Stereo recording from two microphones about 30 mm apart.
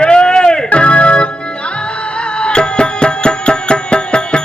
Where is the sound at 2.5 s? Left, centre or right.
Left.